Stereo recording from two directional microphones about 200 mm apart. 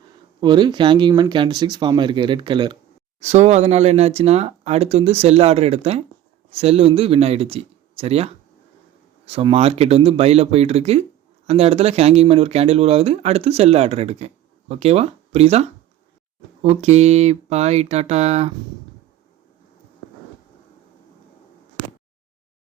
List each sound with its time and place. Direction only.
0.4 s speech: 25° right (ahead or behind)